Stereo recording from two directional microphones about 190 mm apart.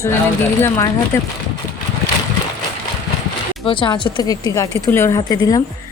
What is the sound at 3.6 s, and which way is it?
Speech, 25° left (ahead or behind).